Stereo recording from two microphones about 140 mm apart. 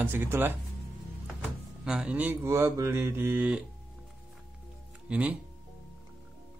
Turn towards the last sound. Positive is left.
turn(degrees=-10)  # may be behind; listen again after turning